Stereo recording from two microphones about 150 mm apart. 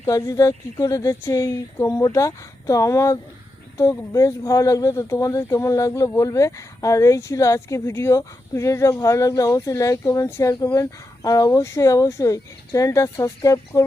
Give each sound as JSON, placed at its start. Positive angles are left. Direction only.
{"t": 0.0, "sound": "speech", "side_deg": 20}